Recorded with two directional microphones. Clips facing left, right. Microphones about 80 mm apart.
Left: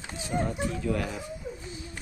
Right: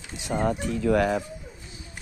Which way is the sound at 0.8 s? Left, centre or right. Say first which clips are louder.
Right 11 dB; right.